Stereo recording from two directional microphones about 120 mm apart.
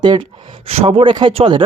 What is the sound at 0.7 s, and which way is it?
Speech, 55° right (ahead or behind).